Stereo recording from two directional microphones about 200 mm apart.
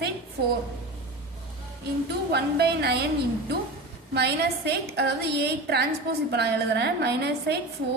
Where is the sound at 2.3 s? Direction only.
55° right (ahead or behind).